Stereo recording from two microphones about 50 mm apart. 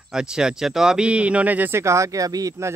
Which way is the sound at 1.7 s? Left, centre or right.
Right.